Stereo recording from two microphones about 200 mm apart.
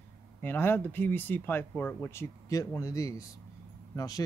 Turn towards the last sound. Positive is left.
turn(degrees=20)  # may be behind; listen again after turning